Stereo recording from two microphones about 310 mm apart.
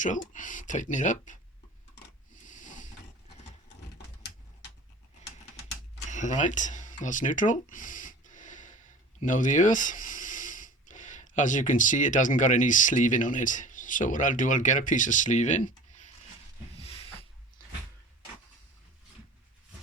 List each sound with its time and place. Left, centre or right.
0.0 s speech: left
2.3 s a sound: left
6.1 s speech: left
16.8 s snort: centre